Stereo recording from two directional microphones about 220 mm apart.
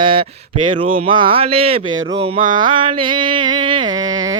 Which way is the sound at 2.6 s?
20° right (ahead or behind).